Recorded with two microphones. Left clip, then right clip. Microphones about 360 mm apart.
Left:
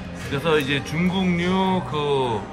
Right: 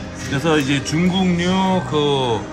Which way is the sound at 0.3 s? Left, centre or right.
Centre.